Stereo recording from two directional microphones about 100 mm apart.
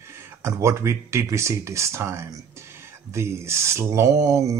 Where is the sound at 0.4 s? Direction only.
30° right (ahead or behind).